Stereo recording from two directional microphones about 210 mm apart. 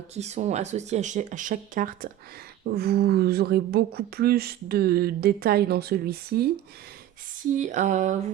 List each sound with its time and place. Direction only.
0.1 s speech: 30° right (ahead or behind); by 6.4 s 50° right (ahead or behind)
7.6 s speech: 35° right (ahead or behind)